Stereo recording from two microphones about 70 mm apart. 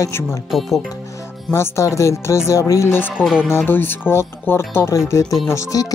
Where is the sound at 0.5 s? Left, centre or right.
Centre.